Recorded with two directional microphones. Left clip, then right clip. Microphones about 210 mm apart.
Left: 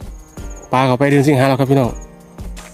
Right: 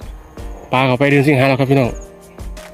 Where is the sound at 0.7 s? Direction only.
20° left (ahead or behind).